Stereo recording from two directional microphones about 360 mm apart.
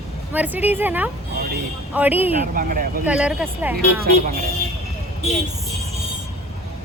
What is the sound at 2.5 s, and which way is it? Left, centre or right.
Speech, right.